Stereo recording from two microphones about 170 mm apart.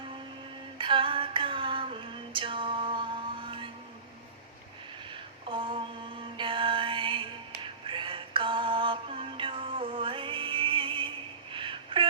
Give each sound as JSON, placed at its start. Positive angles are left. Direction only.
{"t": 0.8, "sound": "female singing", "side_deg": -30}
{"t": 5.1, "sound": "mantra", "side_deg": -30}
{"t": 11.5, "sound": "a sound", "side_deg": -30}